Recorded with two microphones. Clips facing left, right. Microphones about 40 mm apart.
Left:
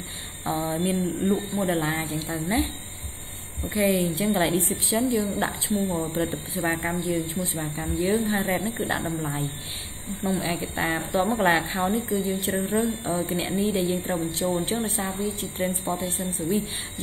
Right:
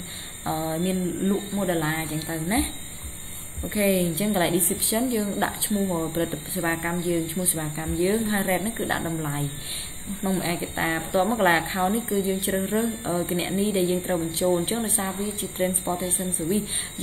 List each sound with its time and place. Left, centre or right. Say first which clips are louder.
0.5 s a woman's voice: even; centre